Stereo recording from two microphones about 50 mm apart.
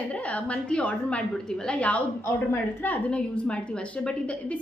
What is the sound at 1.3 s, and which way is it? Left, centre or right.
Speech, centre.